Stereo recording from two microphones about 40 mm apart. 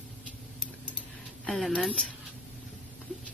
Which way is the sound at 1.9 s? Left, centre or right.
Left.